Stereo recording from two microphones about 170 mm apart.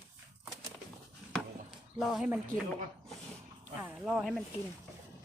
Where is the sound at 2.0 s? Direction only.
5° right (ahead or behind).